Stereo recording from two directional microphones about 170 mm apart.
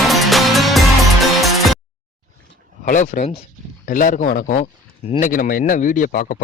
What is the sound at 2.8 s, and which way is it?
Speech, 45° left (ahead or behind).